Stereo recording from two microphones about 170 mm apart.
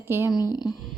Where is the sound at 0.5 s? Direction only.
25° left (ahead or behind).